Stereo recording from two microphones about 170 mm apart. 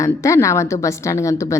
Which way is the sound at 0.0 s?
15° left (ahead or behind).